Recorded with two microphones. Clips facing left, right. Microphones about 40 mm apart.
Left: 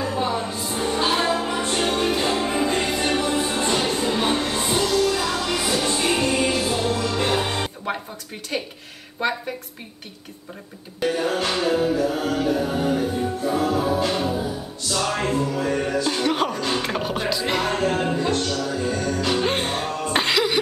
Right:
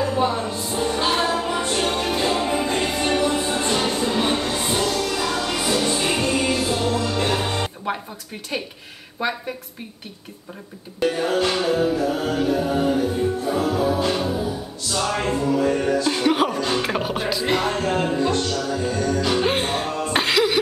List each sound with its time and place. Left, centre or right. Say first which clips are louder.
0.2 s music: right 2 dB; centre
0.7 s music: even; centre
7.2 s music: even; centre
11.0 s music: right 2 dB; centre
16.1 s speech: right 2 dB; centre
16.7 s music: right 2 dB; centre